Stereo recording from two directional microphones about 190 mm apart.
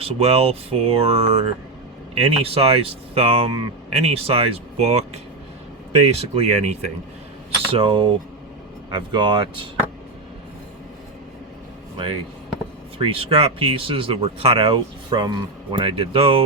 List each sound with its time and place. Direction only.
0.0 s speech: 30° right (ahead or behind)
11.9 s speech: 25° right (ahead or behind)